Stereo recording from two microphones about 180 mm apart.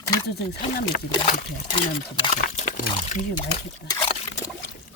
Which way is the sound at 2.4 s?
45° left (ahead or behind).